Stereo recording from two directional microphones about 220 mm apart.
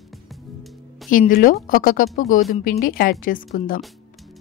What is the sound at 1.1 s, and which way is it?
A woman's voice, 35° left (ahead or behind).